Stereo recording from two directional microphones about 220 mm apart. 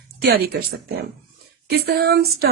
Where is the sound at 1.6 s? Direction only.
45° right (ahead or behind).